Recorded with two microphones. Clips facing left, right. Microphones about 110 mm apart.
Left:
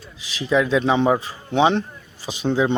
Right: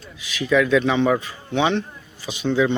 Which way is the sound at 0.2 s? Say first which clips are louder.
Right 1 dB; 30° left (ahead or behind).